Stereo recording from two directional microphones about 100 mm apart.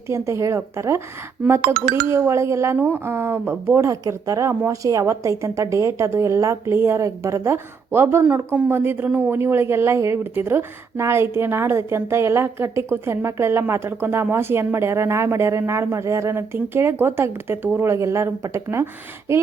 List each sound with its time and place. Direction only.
0.1 s a woman's voice: 30° right (ahead or behind)
2.0 s a woman's voice: 25° right (ahead or behind)